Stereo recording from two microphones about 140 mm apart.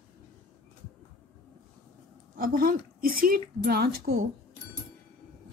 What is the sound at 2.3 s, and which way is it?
A woman's voice, 90° right.